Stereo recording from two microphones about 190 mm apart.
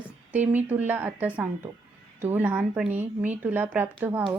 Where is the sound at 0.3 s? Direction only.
10° right (ahead or behind).